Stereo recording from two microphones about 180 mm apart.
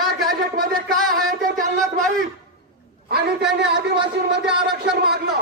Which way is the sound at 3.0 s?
65° right (ahead or behind).